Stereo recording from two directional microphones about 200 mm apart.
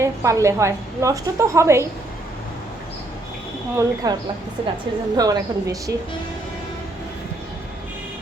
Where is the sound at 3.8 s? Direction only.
20° right (ahead or behind).